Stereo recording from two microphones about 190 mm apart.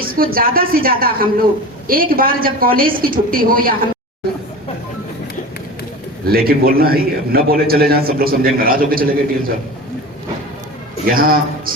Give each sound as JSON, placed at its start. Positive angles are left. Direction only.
{"t": 0.0, "sound": "a man's voice", "side_deg": -50}
{"t": 6.2, "sound": "a man's voice", "side_deg": -50}
{"t": 11.0, "sound": "a man's voice", "side_deg": -50}